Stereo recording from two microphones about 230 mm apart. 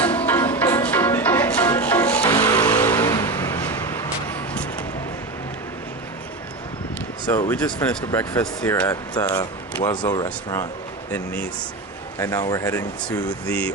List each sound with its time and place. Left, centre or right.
0.0 s music: centre
2.6 s vehicle: centre
2.9 s vehicle: centre
7.2 s speech: centre
12.2 s speech: centre